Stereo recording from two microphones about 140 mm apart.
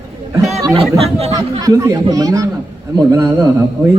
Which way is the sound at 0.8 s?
45° right (ahead or behind).